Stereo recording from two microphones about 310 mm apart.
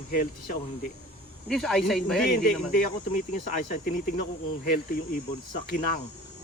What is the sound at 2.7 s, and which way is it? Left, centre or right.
Speech, left.